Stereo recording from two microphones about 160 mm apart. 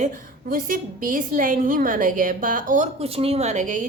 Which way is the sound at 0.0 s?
55° right (ahead or behind).